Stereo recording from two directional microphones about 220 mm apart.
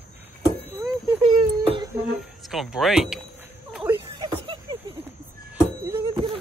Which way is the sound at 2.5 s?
Centre (ahead or behind).